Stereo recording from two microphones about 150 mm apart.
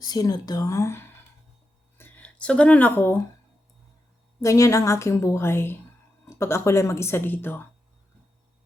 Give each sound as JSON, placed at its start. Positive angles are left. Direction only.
{"t": 0.0, "sound": "a woman's voice", "side_deg": 25}
{"t": 2.0, "sound": "a sound", "side_deg": 10}
{"t": 4.4, "sound": "a woman's voice", "side_deg": 20}